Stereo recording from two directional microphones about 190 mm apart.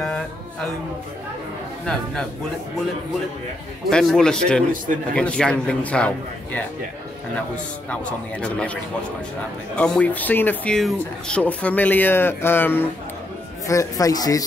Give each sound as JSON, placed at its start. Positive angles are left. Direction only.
{"t": 3.9, "sound": "a man's voice", "side_deg": 5}
{"t": 7.9, "sound": "a man's voice", "side_deg": 5}
{"t": 9.8, "sound": "speech", "side_deg": 5}